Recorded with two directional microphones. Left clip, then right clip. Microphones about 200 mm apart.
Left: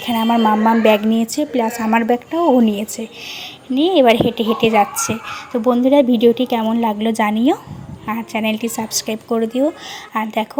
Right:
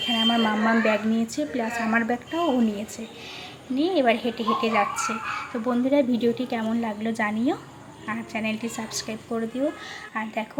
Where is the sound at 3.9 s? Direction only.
40° left (ahead or behind).